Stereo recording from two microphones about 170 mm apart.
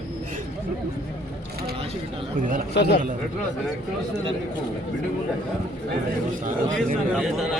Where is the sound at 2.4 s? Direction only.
50° right (ahead or behind).